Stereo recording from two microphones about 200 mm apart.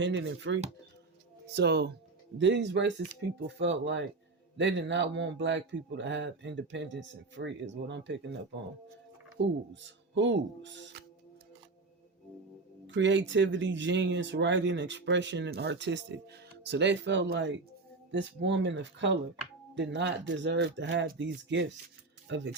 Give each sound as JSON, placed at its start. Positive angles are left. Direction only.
{"t": 0.0, "sound": "speech", "side_deg": -65}
{"t": 9.4, "sound": "speech", "side_deg": -65}
{"t": 12.9, "sound": "speech", "side_deg": -65}